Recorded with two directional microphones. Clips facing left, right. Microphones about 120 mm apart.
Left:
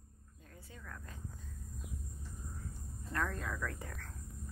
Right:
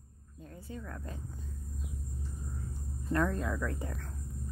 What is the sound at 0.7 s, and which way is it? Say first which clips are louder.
Speech: right 7 dB; 30° right (ahead or behind).